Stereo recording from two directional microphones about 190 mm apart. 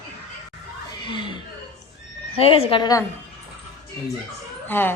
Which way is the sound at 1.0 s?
25° left (ahead or behind).